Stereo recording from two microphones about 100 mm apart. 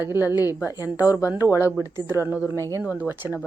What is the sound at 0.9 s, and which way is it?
Speech, 35° left (ahead or behind).